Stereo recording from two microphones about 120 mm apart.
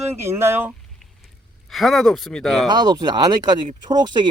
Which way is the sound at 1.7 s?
Centre (ahead or behind).